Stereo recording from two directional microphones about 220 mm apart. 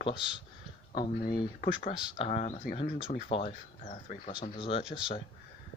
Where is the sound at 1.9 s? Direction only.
25° left (ahead or behind).